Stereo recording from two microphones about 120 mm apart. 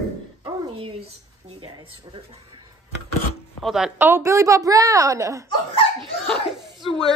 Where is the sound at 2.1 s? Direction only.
35° right (ahead or behind).